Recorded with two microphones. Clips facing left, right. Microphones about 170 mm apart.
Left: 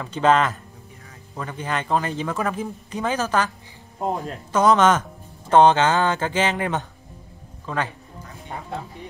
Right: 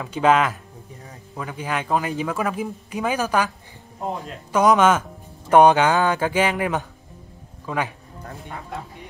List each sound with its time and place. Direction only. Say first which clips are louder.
0.0 s a man's voice: even; 10° right (ahead or behind)